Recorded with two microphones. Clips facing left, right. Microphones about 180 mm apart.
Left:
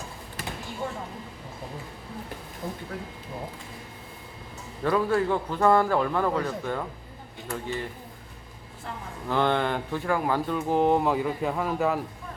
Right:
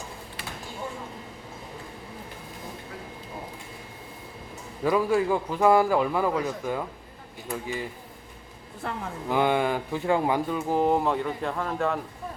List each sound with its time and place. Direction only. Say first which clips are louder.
4.8 s a man's voice: right 1 dB; 10° right (ahead or behind)
8.8 s speech: right 5 dB; 65° right (ahead or behind)
9.3 s a man's voice: right 1 dB; 10° right (ahead or behind)
10.1 s speech: right 2 dB; 20° right (ahead or behind)
10.5 s speech: left 3 dB; centre (ahead or behind)